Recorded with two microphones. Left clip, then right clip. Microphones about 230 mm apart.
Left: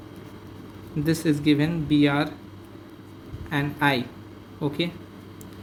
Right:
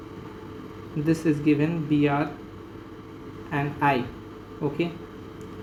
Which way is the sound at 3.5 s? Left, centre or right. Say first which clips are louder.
Even; left.